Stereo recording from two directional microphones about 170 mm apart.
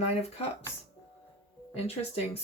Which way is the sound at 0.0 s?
40° left (ahead or behind).